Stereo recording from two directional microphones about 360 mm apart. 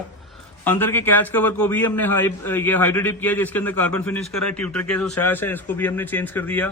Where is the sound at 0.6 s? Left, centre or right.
Centre.